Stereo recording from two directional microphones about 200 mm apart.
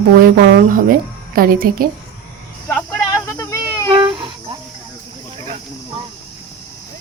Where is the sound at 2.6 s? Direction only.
10° left (ahead or behind).